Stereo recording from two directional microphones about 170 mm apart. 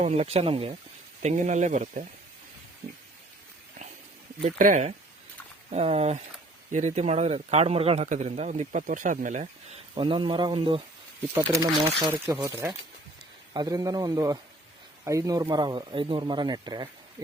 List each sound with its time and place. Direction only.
0.0 s a man's voice: 40° right (ahead or behind)
1.2 s speech: 45° right (ahead or behind)
4.4 s speech: 50° right (ahead or behind)
5.7 s a man's voice: 35° right (ahead or behind)
9.9 s a man's voice: 30° right (ahead or behind)